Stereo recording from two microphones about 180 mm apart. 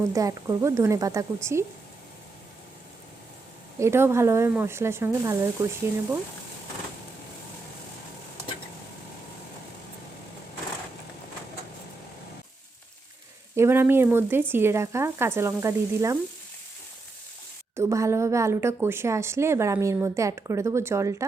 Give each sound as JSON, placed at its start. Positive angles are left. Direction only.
{"t": 0.0, "sound": "a woman's voice", "side_deg": -20}
{"t": 3.8, "sound": "a woman's voice", "side_deg": -15}
{"t": 13.6, "sound": "a woman's voice", "side_deg": -15}
{"t": 17.7, "sound": "a woman's voice", "side_deg": -15}